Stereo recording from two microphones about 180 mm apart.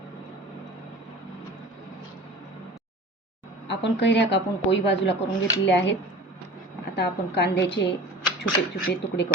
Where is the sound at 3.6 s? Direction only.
75° left (ahead or behind).